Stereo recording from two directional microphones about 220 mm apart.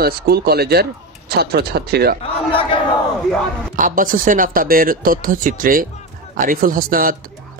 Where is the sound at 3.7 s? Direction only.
35° right (ahead or behind).